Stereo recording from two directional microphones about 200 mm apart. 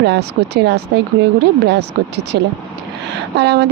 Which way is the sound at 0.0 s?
55° right (ahead or behind).